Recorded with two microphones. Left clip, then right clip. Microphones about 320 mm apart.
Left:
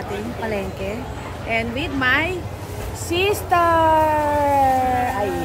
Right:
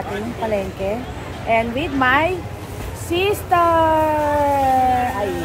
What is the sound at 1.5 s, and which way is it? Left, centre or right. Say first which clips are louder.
A woman's voice: right 5 dB; centre.